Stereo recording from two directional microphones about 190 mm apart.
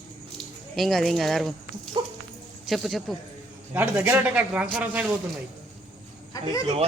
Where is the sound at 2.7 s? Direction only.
Centre (ahead or behind).